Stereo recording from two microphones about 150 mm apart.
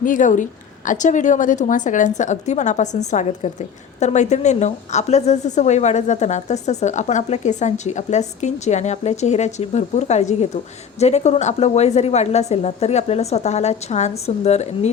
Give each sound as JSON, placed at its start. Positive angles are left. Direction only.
{"t": 0.0, "sound": "a woman's voice", "side_deg": 60}